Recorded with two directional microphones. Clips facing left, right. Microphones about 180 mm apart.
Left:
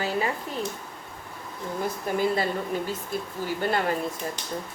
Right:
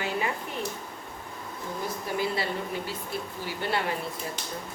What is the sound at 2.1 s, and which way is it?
A woman's voice, 45° left (ahead or behind).